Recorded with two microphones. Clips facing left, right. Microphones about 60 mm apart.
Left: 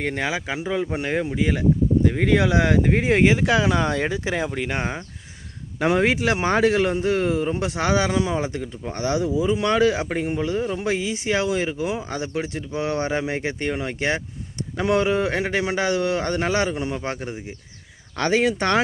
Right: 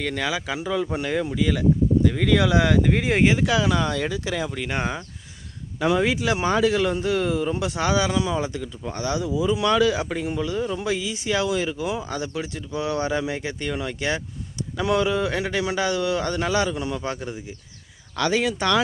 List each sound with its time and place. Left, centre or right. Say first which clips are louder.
0.0 s speech: left 1 dB; left
5.8 s speech: left 2 dB; left